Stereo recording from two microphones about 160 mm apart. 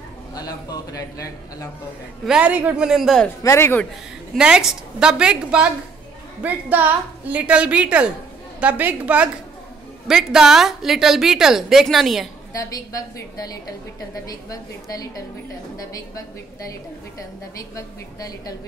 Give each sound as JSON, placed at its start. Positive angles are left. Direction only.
{"t": 0.3, "sound": "a woman's voice", "side_deg": 25}
{"t": 2.2, "sound": "a woman's voice", "side_deg": -5}
{"t": 3.4, "sound": "speech", "side_deg": 15}
{"t": 4.4, "sound": "a woman's voice", "side_deg": -5}
{"t": 12.5, "sound": "a woman's voice", "side_deg": 20}
{"t": 17.6, "sound": "a woman's voice", "side_deg": 20}